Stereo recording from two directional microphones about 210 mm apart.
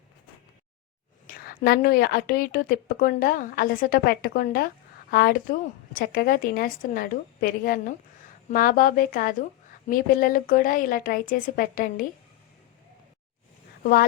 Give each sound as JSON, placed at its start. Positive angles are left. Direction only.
{"t": 1.3, "sound": "a woman's voice", "side_deg": 45}